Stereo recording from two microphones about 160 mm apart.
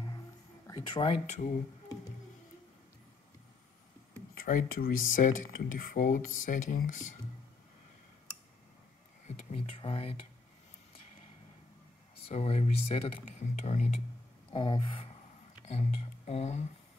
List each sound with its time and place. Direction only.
0.7 s speech: 30° left (ahead or behind)
4.4 s speech: 60° left (ahead or behind)
9.5 s a sound: 35° left (ahead or behind)
12.3 s speech: 40° left (ahead or behind)
14.5 s a sound: 30° left (ahead or behind)
15.6 s speech: 40° left (ahead or behind)